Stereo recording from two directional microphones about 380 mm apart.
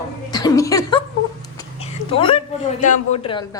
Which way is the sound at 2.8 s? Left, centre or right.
Centre.